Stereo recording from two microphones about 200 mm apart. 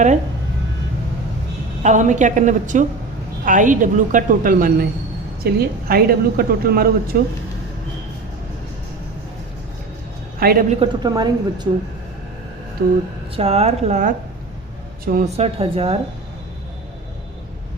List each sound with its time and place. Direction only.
1.8 s a woman's voice: 40° right (ahead or behind)
10.4 s a woman's voice: 50° right (ahead or behind)
10.8 s a woman's voice: 20° right (ahead or behind)
12.8 s a woman's voice: 50° right (ahead or behind)
13.3 s a woman's voice: 30° right (ahead or behind)
15.0 s a woman's voice: 45° right (ahead or behind)
15.4 s a woman's voice: 30° right (ahead or behind)